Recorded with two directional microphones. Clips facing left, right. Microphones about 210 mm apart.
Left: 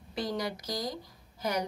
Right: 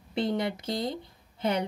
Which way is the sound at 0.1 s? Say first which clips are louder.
Right 5 dB; 25° right (ahead or behind).